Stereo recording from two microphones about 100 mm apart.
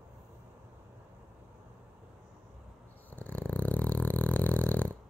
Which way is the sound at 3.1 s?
15° left (ahead or behind).